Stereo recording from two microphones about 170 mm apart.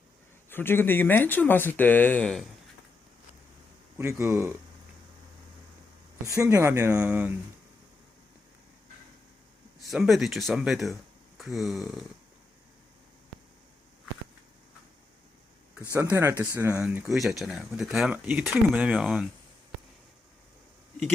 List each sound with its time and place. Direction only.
0.5 s speech: 10° left (ahead or behind)
3.9 s speech: 15° right (ahead or behind)
6.2 s speech: 15° right (ahead or behind)
9.9 s speech: centre (ahead or behind)
15.9 s speech: 15° right (ahead or behind)
16.8 s speech: 5° right (ahead or behind)